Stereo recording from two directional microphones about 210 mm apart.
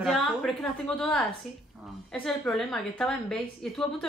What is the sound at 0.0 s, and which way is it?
A woman's voice, centre (ahead or behind).